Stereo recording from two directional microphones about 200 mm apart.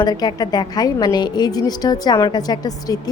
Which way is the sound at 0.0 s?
20° left (ahead or behind).